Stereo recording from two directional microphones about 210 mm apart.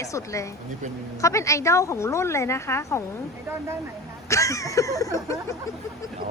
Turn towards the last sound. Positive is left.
turn(degrees=15)  # may be behind; listen again after turning